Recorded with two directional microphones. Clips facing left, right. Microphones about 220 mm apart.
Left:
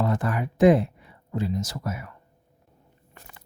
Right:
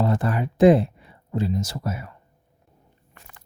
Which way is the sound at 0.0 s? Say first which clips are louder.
Right 2 dB; 30° right (ahead or behind).